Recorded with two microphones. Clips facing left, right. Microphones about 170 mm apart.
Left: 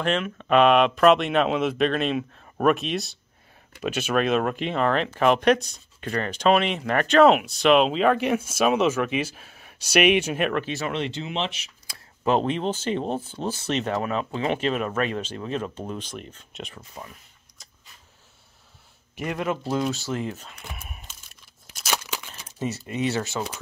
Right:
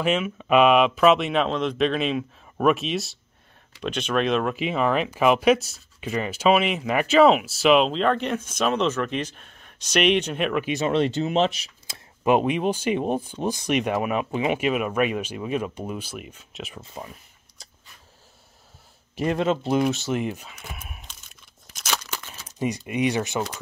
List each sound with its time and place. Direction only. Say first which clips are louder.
0.0 s speech: right 2 dB; 5° right (ahead or behind)
10.6 s speech: right 4 dB; 20° right (ahead or behind)
10.9 s speech: right 7 dB; 40° right (ahead or behind)
11.9 s speech: right 2 dB; 15° right (ahead or behind)
16.7 s speech: right 3 dB; 25° right (ahead or behind)
19.1 s speech: right 5 dB; 30° right (ahead or behind)
20.8 s tearing: even; centre (ahead or behind)
22.6 s speech: right 3 dB; 15° right (ahead or behind)